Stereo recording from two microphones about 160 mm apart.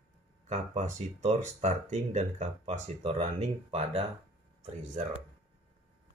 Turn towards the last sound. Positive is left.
turn(degrees=-45)  # may be behind; listen again after turning